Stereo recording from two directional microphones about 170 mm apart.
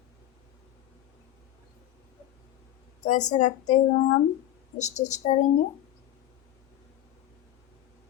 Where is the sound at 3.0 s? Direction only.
45° left (ahead or behind).